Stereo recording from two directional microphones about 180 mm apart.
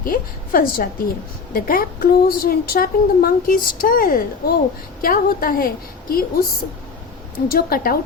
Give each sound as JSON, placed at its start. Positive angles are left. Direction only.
{"t": 0.0, "sound": "a woman's voice", "side_deg": 55}
{"t": 7.5, "sound": "a woman's voice", "side_deg": 55}